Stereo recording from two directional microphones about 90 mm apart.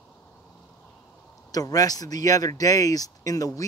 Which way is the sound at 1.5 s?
40° left (ahead or behind).